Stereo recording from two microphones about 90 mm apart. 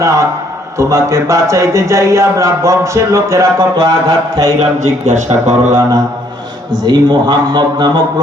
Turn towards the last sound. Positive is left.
turn(degrees=-55)  # may be behind; listen again after turning